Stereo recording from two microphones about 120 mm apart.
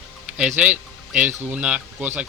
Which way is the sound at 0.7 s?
90° right.